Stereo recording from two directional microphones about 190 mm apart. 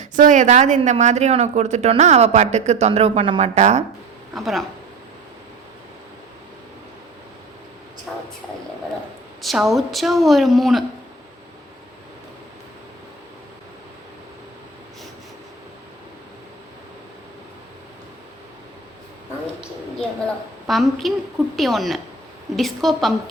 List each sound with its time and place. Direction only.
0.0 s a woman's voice: 40° right (ahead or behind)
4.4 s a woman's voice: centre (ahead or behind)
8.1 s a sound: 5° right (ahead or behind)
9.4 s a woman's voice: centre (ahead or behind)
20.7 s a woman's voice: centre (ahead or behind)